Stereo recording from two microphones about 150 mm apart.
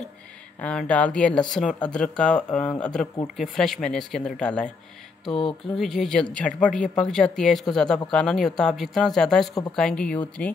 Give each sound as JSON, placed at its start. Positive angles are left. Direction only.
{"t": 0.6, "sound": "speech", "side_deg": 10}
{"t": 5.2, "sound": "music", "side_deg": 0}
{"t": 5.8, "sound": "speech", "side_deg": 0}